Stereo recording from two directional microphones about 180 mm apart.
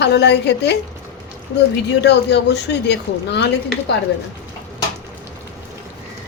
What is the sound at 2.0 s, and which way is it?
A woman's voice, 70° left (ahead or behind).